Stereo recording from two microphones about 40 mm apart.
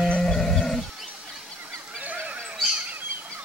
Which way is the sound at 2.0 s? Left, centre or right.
Right.